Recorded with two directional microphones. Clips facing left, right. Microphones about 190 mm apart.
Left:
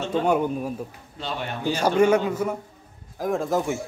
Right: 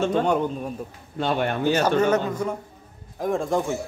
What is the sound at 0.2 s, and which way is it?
Speech, 5° left (ahead or behind).